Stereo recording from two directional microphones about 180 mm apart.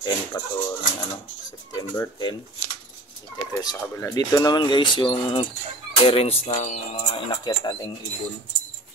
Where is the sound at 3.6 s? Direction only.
20° left (ahead or behind).